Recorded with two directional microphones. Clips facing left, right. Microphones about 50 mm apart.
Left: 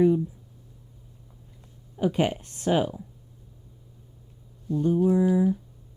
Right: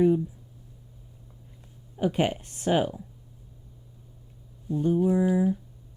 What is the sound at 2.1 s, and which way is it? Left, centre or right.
Speech, centre.